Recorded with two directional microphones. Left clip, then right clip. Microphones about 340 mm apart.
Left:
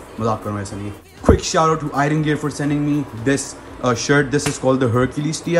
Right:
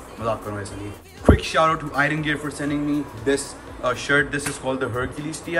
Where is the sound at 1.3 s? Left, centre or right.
Centre.